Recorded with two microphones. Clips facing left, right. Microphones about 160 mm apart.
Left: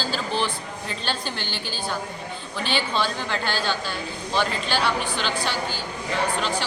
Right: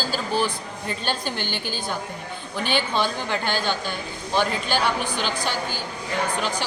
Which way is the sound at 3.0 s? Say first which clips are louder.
Right 1 dB; 15° right (ahead or behind).